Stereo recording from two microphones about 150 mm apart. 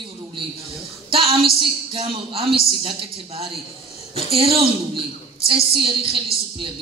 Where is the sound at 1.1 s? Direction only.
40° right (ahead or behind).